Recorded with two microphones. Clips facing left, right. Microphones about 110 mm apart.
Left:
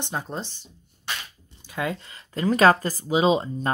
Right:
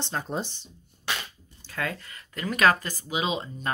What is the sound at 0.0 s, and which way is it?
Speech, 15° left (ahead or behind).